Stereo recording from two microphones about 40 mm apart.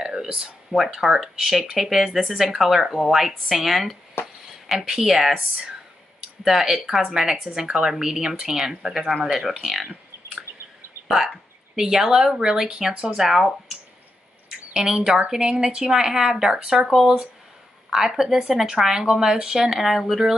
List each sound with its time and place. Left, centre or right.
0.0 s a sound: centre
0.7 s speech: centre
4.2 s a sound: left
4.7 s speech: centre
6.4 s speech: centre
11.1 s speech: centre; by 13.2 s right
13.2 s speech: centre
14.7 s speech: centre
18.0 s speech: centre